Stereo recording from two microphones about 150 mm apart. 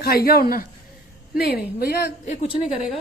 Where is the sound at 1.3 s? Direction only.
90° left.